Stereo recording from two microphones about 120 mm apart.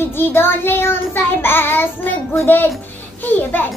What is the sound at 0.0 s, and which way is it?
A child's voice, 20° left (ahead or behind).